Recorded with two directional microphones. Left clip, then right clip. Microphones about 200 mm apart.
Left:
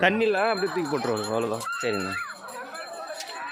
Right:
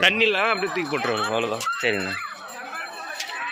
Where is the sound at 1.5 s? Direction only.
5° left (ahead or behind).